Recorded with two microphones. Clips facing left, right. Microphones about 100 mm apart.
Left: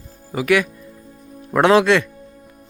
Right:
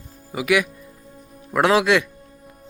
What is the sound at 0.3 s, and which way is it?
Speech, 10° right (ahead or behind).